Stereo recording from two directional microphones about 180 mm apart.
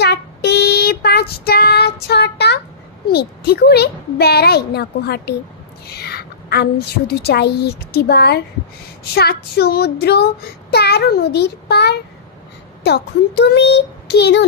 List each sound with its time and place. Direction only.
0.0 s child singing: 65° left (ahead or behind)
12.8 s a child's voice: 65° left (ahead or behind)